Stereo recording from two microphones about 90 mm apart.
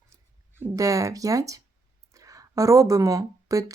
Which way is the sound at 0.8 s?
40° right (ahead or behind).